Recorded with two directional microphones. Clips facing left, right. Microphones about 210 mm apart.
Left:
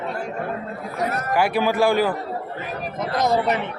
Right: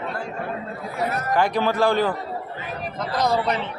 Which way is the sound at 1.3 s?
10° left (ahead or behind).